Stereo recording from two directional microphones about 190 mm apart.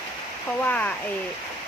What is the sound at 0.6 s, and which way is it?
Speech, 10° left (ahead or behind).